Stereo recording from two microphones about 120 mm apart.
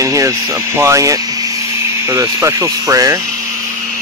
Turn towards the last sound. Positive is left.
turn(degrees=-25)  # may be behind; listen again after turning